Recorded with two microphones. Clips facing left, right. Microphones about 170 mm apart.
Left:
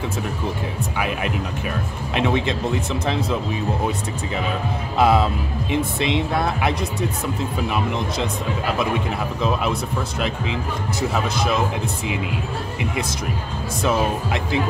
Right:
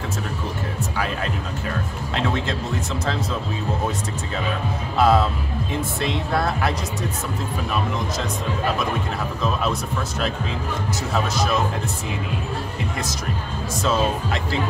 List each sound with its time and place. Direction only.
0.9 s music: 15° left (ahead or behind)
2.1 s speech: 15° left (ahead or behind)
4.9 s speech: 20° left (ahead or behind)